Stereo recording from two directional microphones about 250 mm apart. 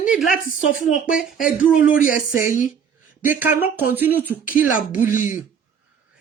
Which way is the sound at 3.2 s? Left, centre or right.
Centre.